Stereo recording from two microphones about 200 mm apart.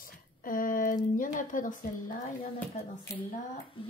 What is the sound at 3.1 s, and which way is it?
Speech, 15° left (ahead or behind).